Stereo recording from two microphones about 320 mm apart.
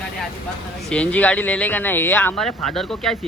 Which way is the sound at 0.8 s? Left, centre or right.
Centre.